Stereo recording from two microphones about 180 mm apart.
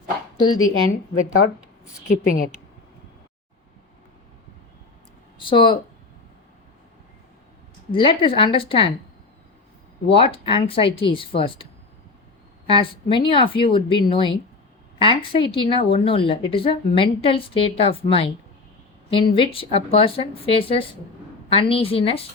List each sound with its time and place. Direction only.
0.3 s speech: 25° left (ahead or behind)
2.0 s a woman's voice: 50° left (ahead or behind)
5.4 s speech: 25° left (ahead or behind)
7.9 s a woman's voice: 30° left (ahead or behind)
10.1 s a woman's voice: 30° left (ahead or behind)
12.6 s a woman's voice: 30° left (ahead or behind)